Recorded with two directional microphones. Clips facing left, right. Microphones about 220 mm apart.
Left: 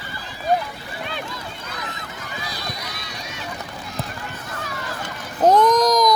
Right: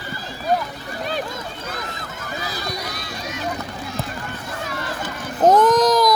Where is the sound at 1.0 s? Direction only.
40° right (ahead or behind).